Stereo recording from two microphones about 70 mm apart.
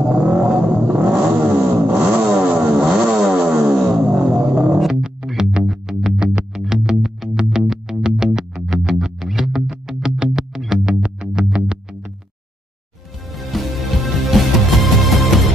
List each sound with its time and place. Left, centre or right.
0.1 s vehicle: centre
0.8 s vehicle: right
2.9 s vehicle: centre
4.0 s music: centre
13.3 s music: centre